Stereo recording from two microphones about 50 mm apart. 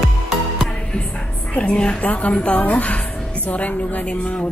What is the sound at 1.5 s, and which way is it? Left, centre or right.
A woman's voice, left.